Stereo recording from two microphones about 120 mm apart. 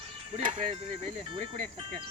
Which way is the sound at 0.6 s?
70° right (ahead or behind).